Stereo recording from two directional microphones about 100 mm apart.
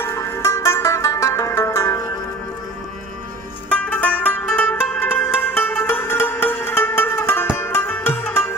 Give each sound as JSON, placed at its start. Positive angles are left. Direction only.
{"t": 0.0, "sound": "music", "side_deg": 25}
{"t": 3.9, "sound": "music", "side_deg": 15}